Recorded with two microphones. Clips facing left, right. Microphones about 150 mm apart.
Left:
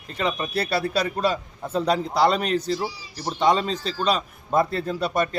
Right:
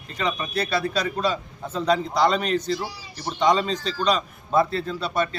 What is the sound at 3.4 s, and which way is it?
Speech, 5° left (ahead or behind).